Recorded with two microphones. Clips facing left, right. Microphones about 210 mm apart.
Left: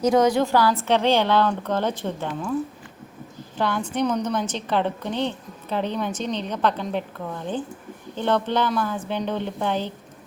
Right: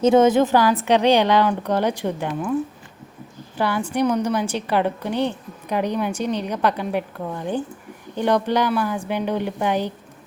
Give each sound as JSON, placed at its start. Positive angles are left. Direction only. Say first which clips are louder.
{"t": 0.0, "sound": "a woman's voice", "louder": "right 4 dB", "side_deg": -25}
{"t": 3.6, "sound": "a woman's voice", "louder": "right 3 dB", "side_deg": -5}